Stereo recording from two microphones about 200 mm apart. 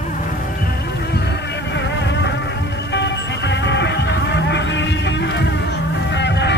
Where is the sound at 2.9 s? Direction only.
60° left (ahead or behind).